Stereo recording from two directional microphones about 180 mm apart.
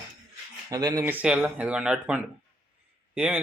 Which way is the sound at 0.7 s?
20° right (ahead or behind).